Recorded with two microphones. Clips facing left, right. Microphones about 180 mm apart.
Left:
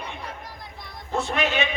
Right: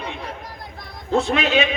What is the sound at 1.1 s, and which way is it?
Speech, 80° right.